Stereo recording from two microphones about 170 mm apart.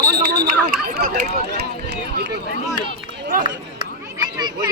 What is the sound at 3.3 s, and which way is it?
Speech, 55° right (ahead or behind).